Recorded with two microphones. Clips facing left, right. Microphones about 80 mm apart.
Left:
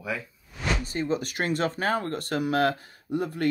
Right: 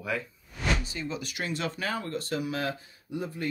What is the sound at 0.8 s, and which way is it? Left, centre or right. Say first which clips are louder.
Speech: left 7 dB; left.